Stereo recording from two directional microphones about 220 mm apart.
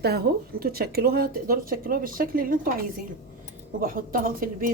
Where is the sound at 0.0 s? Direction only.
45° right (ahead or behind).